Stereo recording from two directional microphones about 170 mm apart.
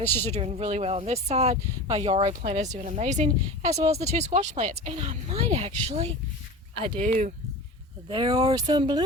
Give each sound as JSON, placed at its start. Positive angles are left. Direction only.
{"t": 0.0, "sound": "speech", "side_deg": 10}
{"t": 0.3, "sound": "speech", "side_deg": -40}
{"t": 8.1, "sound": "speech", "side_deg": -25}